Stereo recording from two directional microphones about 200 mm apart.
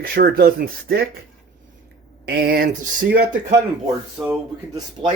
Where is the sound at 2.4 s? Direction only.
50° right (ahead or behind).